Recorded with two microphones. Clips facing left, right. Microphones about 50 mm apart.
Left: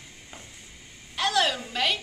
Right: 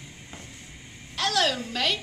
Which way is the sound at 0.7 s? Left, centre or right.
Centre.